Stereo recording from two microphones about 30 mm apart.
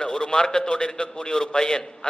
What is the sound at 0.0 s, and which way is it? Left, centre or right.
A man's voice, left.